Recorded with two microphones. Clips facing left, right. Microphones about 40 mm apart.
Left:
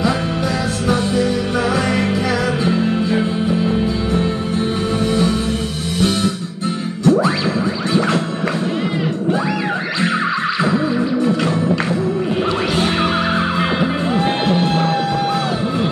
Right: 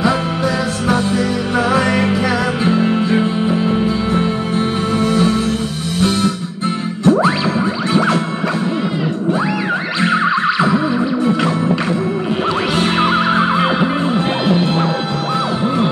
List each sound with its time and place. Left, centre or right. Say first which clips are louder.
2.8 s music: right 2 dB; right
7.1 s music: right 2 dB; right
12.7 s music: right 5 dB; right